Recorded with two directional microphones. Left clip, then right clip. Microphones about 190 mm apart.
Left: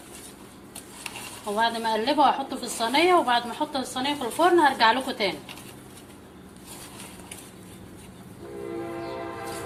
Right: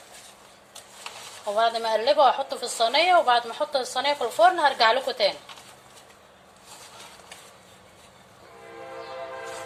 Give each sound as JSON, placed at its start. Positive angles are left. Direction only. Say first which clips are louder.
{"t": 1.5, "sound": "a woman's voice", "louder": "right 2 dB", "side_deg": -45}